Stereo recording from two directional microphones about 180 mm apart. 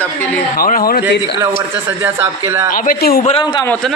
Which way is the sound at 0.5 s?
50° left (ahead or behind).